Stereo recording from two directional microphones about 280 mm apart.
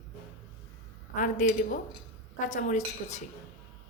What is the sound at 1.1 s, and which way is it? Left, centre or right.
A man's voice, left.